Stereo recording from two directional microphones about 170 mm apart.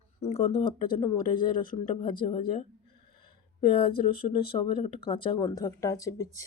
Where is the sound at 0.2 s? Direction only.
40° left (ahead or behind).